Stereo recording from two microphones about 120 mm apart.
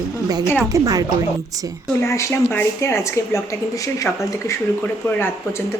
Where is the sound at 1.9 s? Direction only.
25° left (ahead or behind).